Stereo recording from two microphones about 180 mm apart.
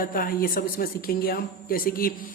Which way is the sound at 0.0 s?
50° left (ahead or behind).